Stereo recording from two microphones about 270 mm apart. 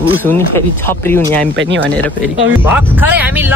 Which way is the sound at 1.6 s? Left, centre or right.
Right.